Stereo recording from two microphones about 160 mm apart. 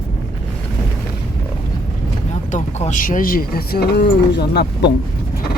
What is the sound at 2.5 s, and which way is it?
Speech, 45° left (ahead or behind).